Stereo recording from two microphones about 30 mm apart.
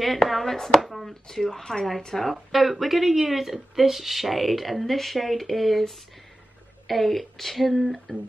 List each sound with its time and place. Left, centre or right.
0.0 s speech: centre
1.2 s speech: centre